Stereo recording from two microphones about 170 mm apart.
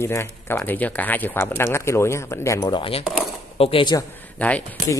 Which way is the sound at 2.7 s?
35° left (ahead or behind).